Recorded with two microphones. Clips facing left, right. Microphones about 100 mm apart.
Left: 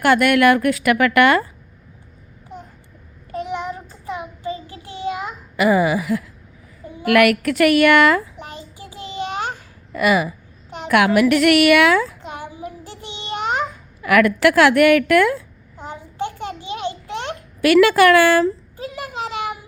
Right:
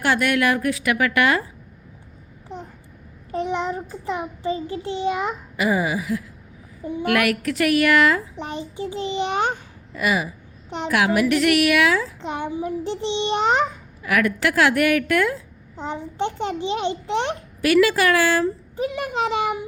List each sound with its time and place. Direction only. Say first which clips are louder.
0.0 s a woman's voice: left 6 dB; 60° left (ahead or behind)
3.3 s child singing: right 2 dB; 25° right (ahead or behind)
5.5 s a woman's voice: left 6 dB; 70° left (ahead or behind)
8.4 s a child's voice: right 7 dB; 20° right (ahead or behind)
9.9 s a woman's voice: left 5 dB; 75° left (ahead or behind)
12.2 s a child's voice: right 5 dB; 25° right (ahead or behind)
14.0 s a woman's voice: left 6 dB; 75° left (ahead or behind)
15.7 s a child's voice: right 4 dB; 25° right (ahead or behind)
17.6 s a woman's voice: left 5 dB; 75° left (ahead or behind)
18.8 s a child's voice: right 5 dB; 20° right (ahead or behind)